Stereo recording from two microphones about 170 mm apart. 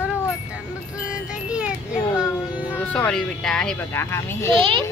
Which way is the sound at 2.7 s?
10° left (ahead or behind).